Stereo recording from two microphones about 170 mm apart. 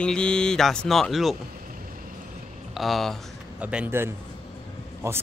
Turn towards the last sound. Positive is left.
turn(degrees=-15)  # may be behind; listen again after turning